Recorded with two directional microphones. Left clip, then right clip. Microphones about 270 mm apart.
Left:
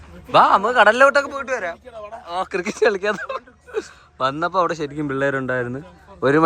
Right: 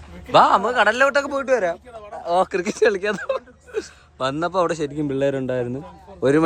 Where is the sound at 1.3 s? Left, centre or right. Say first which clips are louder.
Right 5 dB; centre.